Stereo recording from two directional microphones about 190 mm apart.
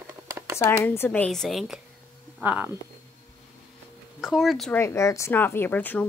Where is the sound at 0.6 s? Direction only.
10° left (ahead or behind); by 2.8 s 10° right (ahead or behind).